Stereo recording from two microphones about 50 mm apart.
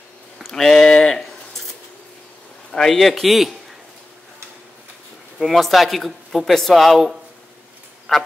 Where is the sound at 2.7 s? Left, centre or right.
Centre.